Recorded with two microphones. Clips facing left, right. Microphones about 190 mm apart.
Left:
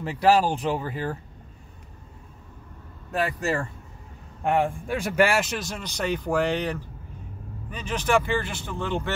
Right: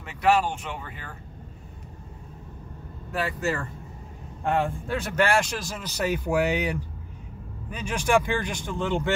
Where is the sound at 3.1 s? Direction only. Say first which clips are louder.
Left 2 dB; 35° left (ahead or behind).